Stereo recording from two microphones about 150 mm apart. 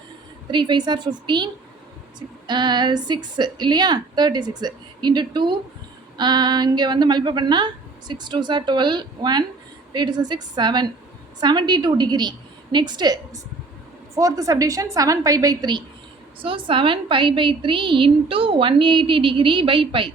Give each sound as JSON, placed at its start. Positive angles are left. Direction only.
{"t": 0.5, "sound": "a woman's voice", "side_deg": -30}